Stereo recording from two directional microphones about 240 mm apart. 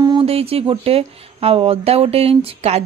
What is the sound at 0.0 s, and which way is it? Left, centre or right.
A woman's voice, centre.